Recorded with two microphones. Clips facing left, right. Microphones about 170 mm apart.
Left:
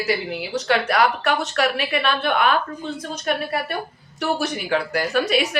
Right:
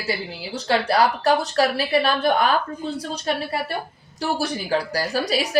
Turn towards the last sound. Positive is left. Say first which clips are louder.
# left 3 dB
turn(degrees=-35)  # may be behind; listen again after turning